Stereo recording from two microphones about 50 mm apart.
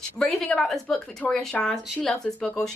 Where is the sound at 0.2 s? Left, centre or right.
Centre.